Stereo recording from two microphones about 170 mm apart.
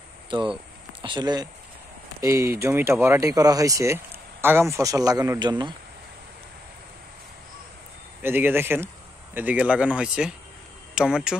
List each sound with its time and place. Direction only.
1.0 s speech: 25° right (ahead or behind)
8.2 s speech: 10° right (ahead or behind)